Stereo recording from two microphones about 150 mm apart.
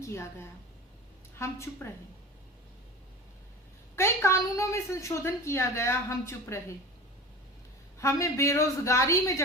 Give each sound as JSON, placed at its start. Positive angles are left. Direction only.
{"t": 0.0, "sound": "a woman's voice", "side_deg": 15}
{"t": 3.9, "sound": "a woman's voice", "side_deg": 15}
{"t": 7.9, "sound": "a woman's voice", "side_deg": 20}